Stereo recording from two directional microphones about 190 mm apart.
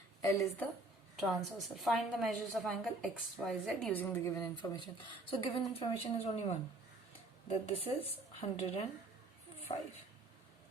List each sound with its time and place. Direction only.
0.2 s a woman's voice: 15° left (ahead or behind)
1.2 s a woman's voice: centre (ahead or behind); by 9.8 s 30° left (ahead or behind)